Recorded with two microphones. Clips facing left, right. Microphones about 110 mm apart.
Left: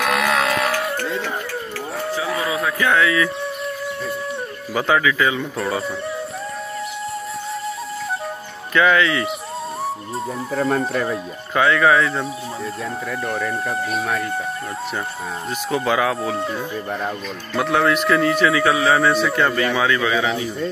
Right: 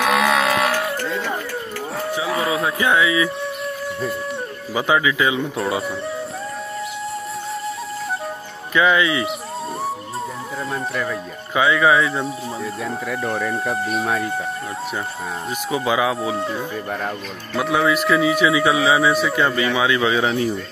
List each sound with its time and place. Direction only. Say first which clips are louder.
0.0 s music: right 2 dB; centre (ahead or behind)
2.1 s livestock: right 2 dB; 25° right (ahead or behind)
2.9 s speech: even; 15° right (ahead or behind)
4.7 s speech: even; 10° right (ahead or behind)
8.7 s speech: left 1 dB; 10° right (ahead or behind)
10.5 s speech: left 9 dB; 60° left (ahead or behind)
10.9 s speech: left 2 dB; 35° left (ahead or behind)
11.5 s speech: even; 5° right (ahead or behind)
15.7 s speech: even; 5° right (ahead or behind)
20.0 s speech: right 1 dB; 25° right (ahead or behind)